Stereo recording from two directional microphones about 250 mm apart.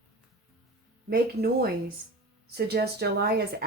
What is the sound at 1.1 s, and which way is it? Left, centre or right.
Speech, right.